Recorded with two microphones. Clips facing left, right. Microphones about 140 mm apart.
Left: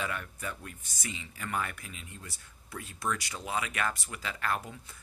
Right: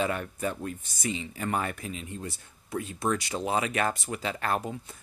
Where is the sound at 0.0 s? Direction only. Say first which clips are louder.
Right 8 dB; 30° right (ahead or behind).